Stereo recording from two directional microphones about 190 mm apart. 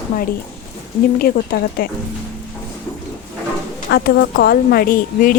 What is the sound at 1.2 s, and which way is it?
Speech, 55° left (ahead or behind).